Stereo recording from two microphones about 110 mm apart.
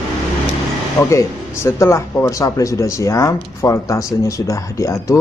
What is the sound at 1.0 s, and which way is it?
Speech, 30° left (ahead or behind).